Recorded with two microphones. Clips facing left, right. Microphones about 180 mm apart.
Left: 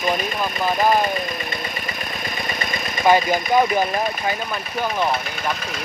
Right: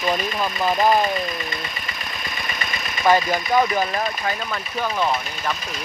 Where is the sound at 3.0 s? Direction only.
15° left (ahead or behind).